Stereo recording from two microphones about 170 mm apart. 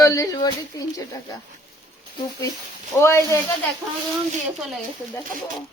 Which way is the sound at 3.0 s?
15° left (ahead or behind).